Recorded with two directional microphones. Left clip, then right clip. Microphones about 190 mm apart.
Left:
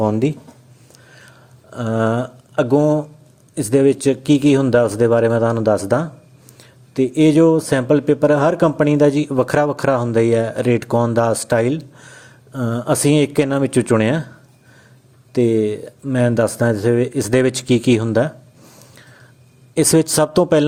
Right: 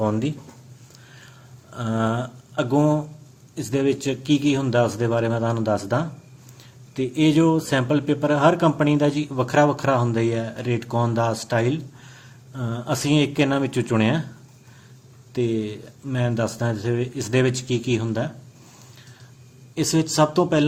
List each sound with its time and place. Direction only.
0.0 s speech: 30° left (ahead or behind)
1.7 s speech: 35° left (ahead or behind)
3.5 s a man's voice: 40° left (ahead or behind)
15.3 s a man's voice: 40° left (ahead or behind)
19.7 s speech: 45° left (ahead or behind)